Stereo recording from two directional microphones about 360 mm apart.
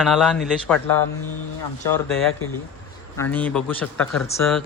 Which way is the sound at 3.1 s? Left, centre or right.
Centre.